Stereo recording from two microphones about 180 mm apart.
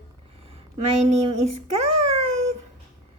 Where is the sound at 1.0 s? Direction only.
40° right (ahead or behind).